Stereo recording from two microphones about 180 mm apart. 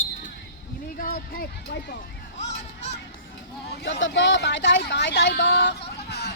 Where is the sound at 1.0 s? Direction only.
55° left (ahead or behind).